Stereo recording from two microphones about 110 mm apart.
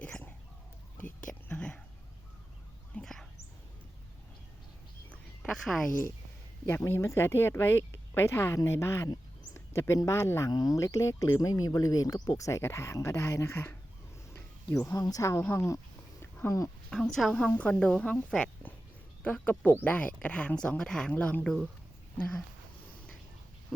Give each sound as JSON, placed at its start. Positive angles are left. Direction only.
{"t": 0.0, "sound": "chicken", "side_deg": 15}
{"t": 0.9, "sound": "whispering", "side_deg": 20}
{"t": 2.9, "sound": "dog", "side_deg": 5}
{"t": 5.4, "sound": "a woman's voice", "side_deg": 0}
{"t": 6.7, "sound": "speech", "side_deg": 25}
{"t": 10.5, "sound": "speech", "side_deg": 35}
{"t": 14.3, "sound": "a sound", "side_deg": 20}
{"t": 15.0, "sound": "speech", "side_deg": 30}
{"t": 16.2, "sound": "a sound", "side_deg": 25}
{"t": 16.9, "sound": "a woman's voice", "side_deg": 5}
{"t": 17.3, "sound": "speech", "side_deg": 15}